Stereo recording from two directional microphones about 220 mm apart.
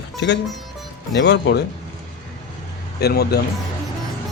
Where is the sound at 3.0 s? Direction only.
45° left (ahead or behind).